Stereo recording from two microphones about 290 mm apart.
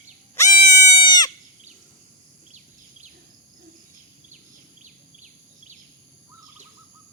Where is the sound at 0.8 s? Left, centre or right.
Centre.